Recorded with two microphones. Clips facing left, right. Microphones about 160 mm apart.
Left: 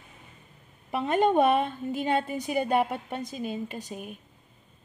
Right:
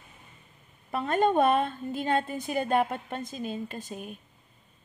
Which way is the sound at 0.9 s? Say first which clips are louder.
Left 1 dB; 15° left (ahead or behind).